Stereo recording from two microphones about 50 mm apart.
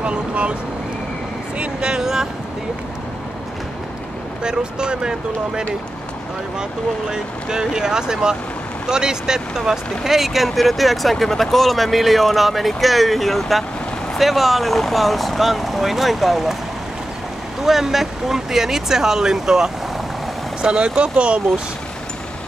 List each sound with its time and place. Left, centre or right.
0.0 s speech: right
1.6 s speech: centre
4.4 s speech: centre
7.1 s speech: centre
17.6 s speech: centre; by 21.4 s right